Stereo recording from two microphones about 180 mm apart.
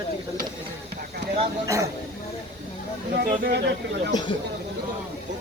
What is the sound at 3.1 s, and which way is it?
Speech, 60° right (ahead or behind).